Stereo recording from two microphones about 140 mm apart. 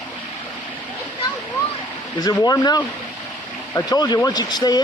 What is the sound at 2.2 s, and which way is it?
Speech, 30° left (ahead or behind).